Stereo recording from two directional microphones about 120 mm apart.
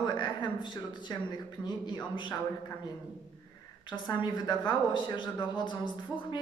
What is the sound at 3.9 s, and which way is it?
A woman's voice, 40° left (ahead or behind).